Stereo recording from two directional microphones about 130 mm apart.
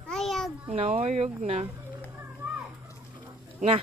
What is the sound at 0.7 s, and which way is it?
Speech, 55° right (ahead or behind).